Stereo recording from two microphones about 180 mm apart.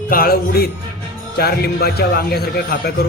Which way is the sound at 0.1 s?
55° left (ahead or behind).